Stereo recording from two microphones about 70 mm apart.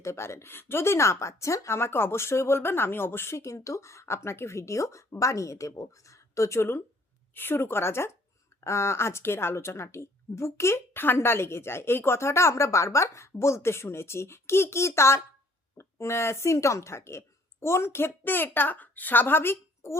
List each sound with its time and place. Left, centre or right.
0.0 s a woman's voice: left